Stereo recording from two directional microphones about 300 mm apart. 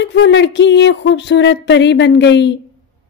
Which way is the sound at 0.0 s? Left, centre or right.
Left.